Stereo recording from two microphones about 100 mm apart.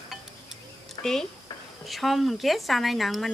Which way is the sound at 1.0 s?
45° left (ahead or behind).